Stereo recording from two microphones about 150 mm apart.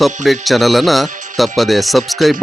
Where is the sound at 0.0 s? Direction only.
Centre (ahead or behind).